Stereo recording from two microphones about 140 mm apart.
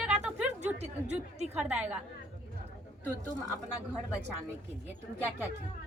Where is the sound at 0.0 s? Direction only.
5° right (ahead or behind).